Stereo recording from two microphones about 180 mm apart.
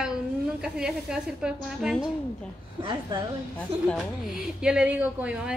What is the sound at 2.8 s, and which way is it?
Speech, 25° right (ahead or behind).